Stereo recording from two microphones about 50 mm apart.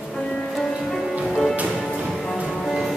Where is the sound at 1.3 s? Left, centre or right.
Centre.